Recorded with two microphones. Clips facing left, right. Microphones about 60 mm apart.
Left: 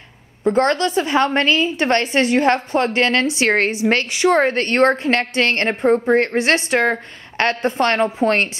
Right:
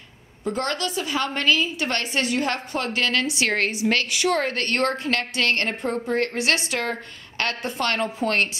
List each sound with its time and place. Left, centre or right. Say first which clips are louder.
0.4 s a woman's voice: left 10 dB; left